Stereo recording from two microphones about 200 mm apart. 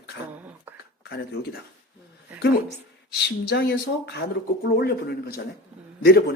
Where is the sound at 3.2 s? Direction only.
50° left (ahead or behind).